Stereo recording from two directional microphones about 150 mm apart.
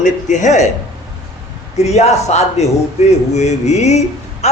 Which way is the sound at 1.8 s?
45° left (ahead or behind).